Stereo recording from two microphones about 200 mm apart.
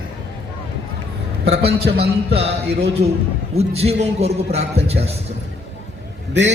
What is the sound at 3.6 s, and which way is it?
A man's voice, 30° right (ahead or behind).